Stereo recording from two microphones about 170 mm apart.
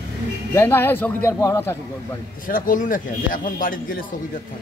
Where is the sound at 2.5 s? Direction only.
55° left (ahead or behind).